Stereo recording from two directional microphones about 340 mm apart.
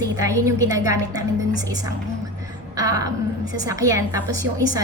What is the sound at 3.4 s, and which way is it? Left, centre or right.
Speech, left.